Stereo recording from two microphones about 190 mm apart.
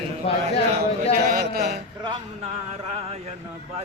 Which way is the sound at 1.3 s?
50° right (ahead or behind).